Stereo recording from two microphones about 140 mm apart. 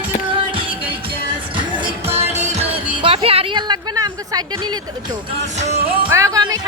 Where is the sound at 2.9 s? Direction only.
35° right (ahead or behind).